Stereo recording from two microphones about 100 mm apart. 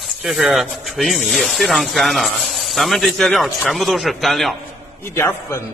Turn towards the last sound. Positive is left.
turn(degrees=25)  # may be behind; listen again after turning